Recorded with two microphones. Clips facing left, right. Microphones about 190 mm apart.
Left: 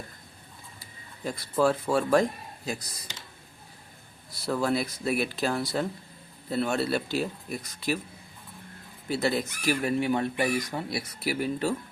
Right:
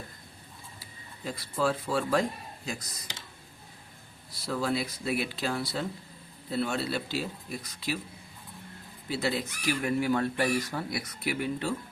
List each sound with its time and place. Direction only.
1.2 s speech: 50° left (ahead or behind)
2.6 s speech: 35° left (ahead or behind)
4.4 s speech: 50° left (ahead or behind)
9.0 s speech: 50° left (ahead or behind)
9.8 s speech: 20° left (ahead or behind)
10.9 s speech: 30° left (ahead or behind)